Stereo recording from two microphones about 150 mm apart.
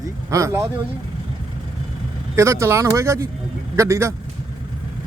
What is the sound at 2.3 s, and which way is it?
A man's voice, 20° right (ahead or behind).